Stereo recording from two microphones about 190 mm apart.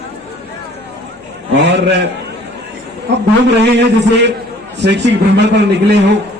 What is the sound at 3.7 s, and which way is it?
A man's voice, 65° right (ahead or behind).